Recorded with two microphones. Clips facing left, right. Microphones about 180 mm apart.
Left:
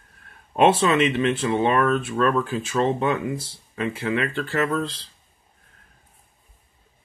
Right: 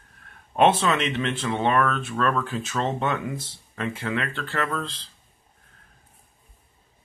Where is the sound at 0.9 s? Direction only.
10° left (ahead or behind).